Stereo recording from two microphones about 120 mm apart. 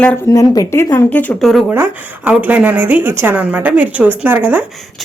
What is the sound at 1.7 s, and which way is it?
A woman's voice, 20° right (ahead or behind).